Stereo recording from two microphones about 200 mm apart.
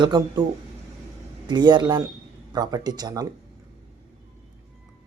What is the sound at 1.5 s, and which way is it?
Speech, 20° right (ahead or behind).